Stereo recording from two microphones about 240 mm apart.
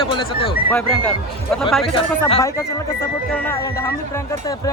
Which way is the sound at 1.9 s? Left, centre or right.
Left.